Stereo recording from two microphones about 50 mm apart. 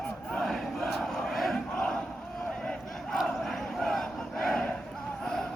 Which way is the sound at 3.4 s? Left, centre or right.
Centre.